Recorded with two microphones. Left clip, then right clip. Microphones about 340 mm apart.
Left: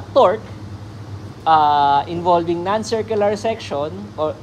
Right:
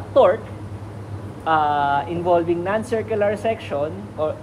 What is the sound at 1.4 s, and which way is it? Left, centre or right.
Speech, left.